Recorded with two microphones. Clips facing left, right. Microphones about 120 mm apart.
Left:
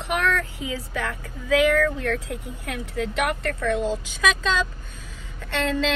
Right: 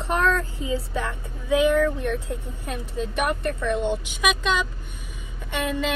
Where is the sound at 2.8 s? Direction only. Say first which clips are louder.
Left 3 dB; 70° left (ahead or behind).